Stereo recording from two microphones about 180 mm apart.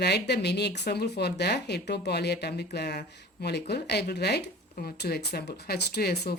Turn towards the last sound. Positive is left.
turn(degrees=65)  # may be behind; listen again after turning